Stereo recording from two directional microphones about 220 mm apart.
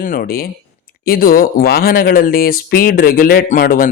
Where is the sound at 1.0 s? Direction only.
45° left (ahead or behind).